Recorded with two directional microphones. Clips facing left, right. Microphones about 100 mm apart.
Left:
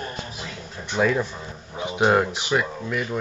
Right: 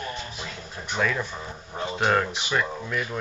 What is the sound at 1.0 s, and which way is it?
Speech, 20° left (ahead or behind).